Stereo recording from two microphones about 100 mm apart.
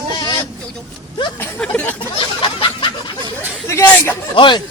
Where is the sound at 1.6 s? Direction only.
10° left (ahead or behind).